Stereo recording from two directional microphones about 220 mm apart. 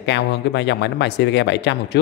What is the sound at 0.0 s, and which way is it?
Speech, 50° left (ahead or behind).